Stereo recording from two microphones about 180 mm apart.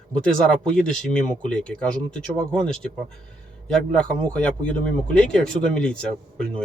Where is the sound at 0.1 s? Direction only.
5° left (ahead or behind).